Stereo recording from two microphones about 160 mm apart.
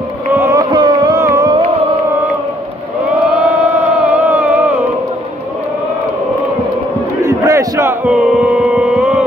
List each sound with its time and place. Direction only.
0.4 s carnatic music: 20° right (ahead or behind)
3.5 s a sound: 10° right (ahead or behind)
7.2 s battle cry: 20° right (ahead or behind)
8.0 s music: 5° right (ahead or behind)